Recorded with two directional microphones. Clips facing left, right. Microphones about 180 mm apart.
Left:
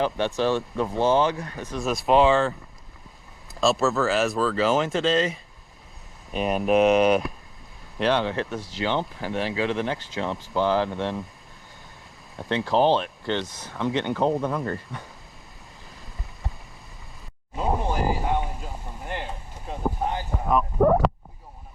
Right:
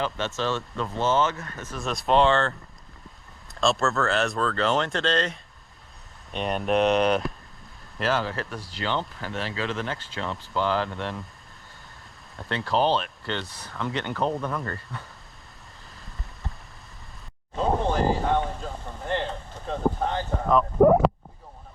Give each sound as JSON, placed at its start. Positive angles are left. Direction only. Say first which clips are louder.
{"t": 0.0, "sound": "speech", "louder": "left 5 dB", "side_deg": 15}
{"t": 1.8, "sound": "speech", "louder": "left 2 dB", "side_deg": 5}
{"t": 8.3, "sound": "speech", "louder": "left 5 dB", "side_deg": 20}
{"t": 12.4, "sound": "speech", "louder": "left 3 dB", "side_deg": 20}
{"t": 17.5, "sound": "a sound", "louder": "right 2 dB", "side_deg": 10}
{"t": 20.7, "sound": "a sound", "louder": "right 3 dB", "side_deg": -20}